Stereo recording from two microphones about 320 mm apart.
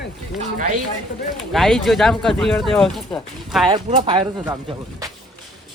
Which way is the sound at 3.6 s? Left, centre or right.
Centre.